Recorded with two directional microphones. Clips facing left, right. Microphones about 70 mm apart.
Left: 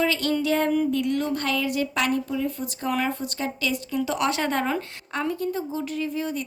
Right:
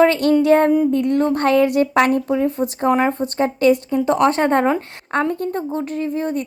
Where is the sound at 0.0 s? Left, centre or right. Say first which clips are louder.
Right 10 dB; right.